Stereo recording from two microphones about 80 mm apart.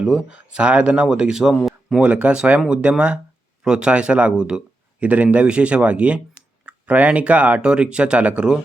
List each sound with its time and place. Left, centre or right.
0.0 s speech: centre
1.5 s a sound: centre
2.0 s speech: centre